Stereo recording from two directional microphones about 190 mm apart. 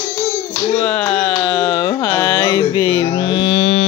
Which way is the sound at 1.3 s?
25° left (ahead or behind).